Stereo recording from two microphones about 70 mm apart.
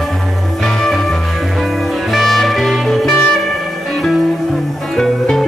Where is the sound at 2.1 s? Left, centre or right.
Centre.